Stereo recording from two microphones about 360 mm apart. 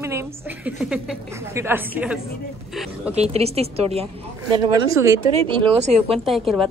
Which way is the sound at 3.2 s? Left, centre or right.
Centre.